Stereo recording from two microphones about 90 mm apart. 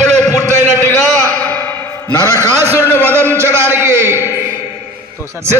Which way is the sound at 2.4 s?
30° right (ahead or behind).